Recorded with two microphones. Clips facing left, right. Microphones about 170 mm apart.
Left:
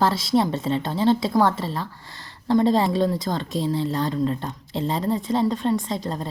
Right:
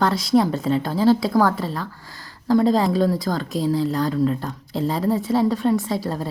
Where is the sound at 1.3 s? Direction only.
25° left (ahead or behind).